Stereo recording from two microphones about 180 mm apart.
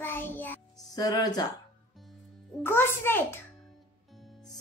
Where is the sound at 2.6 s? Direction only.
15° left (ahead or behind).